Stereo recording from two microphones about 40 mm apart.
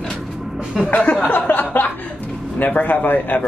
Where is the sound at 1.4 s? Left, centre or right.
Left.